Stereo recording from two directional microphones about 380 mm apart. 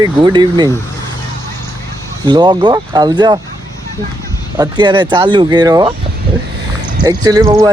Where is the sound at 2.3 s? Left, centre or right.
Centre.